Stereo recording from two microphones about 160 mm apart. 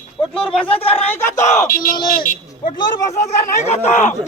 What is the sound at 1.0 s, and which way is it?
Battle cry, 15° left (ahead or behind).